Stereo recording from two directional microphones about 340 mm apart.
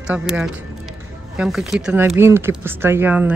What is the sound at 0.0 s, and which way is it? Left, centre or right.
Speech, centre.